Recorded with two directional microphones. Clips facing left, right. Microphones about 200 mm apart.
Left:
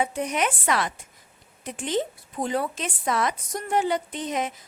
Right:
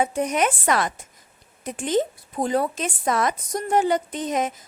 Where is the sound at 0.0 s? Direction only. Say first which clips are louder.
Right 4 dB; 45° right (ahead or behind).